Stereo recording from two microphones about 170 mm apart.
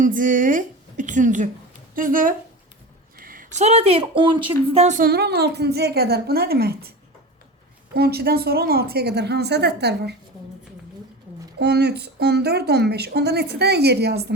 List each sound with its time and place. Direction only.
0.0 s a woman's voice: 50° right (ahead or behind)
5.0 s speech: 70° right (ahead or behind)
7.9 s speech: 65° right (ahead or behind)
11.6 s speech: 75° right (ahead or behind)